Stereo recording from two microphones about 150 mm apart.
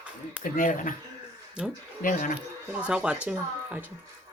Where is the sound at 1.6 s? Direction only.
5° right (ahead or behind).